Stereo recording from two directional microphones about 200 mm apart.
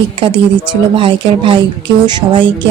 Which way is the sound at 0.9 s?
25° right (ahead or behind).